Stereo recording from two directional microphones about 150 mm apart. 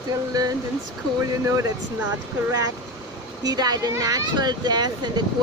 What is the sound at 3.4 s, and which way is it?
Speech, 25° right (ahead or behind).